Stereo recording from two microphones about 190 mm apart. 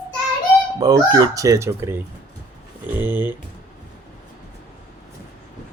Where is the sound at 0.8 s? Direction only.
20° right (ahead or behind).